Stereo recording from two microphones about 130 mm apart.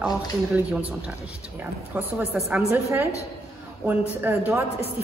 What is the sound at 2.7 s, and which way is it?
A woman's voice, 20° right (ahead or behind).